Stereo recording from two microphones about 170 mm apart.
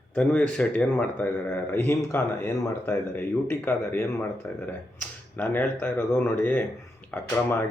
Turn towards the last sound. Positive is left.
turn(degrees=10)  # may be behind; listen again after turning